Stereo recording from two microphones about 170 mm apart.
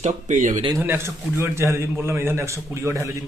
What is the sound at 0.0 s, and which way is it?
Speech, 45° right (ahead or behind).